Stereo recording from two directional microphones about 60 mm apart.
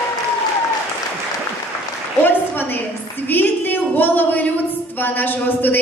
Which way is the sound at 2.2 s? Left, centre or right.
Left.